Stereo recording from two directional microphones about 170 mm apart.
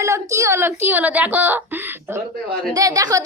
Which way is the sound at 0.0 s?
15° right (ahead or behind).